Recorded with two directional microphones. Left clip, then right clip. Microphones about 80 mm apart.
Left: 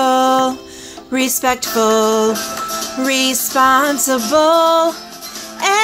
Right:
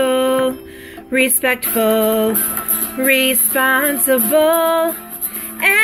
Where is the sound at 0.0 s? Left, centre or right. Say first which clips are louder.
Left 2 dB; left.